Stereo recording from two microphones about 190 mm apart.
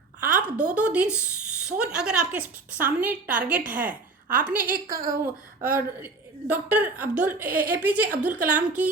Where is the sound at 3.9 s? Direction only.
45° right (ahead or behind).